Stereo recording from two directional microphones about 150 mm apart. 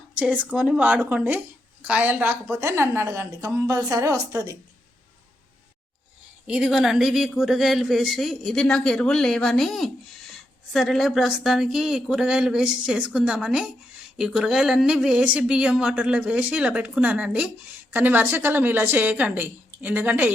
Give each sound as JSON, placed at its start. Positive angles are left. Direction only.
{"t": 0.2, "sound": "a woman's voice", "side_deg": -5}
{"t": 6.5, "sound": "speech", "side_deg": -5}